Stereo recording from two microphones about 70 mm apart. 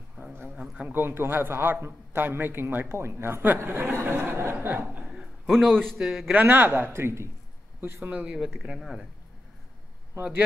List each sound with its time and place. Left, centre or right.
0.2 s a sound: right
0.6 s a man's voice: right
5.5 s a man's voice: centre
5.9 s speech: centre
6.3 s speech: right
8.1 s speech: centre